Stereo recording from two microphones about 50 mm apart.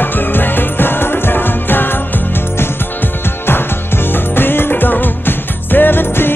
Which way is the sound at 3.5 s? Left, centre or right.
Left.